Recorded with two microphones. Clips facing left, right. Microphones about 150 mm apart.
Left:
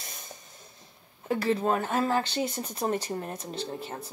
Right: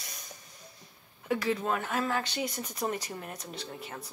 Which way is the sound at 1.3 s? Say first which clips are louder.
Left 4 dB; 35° left (ahead or behind).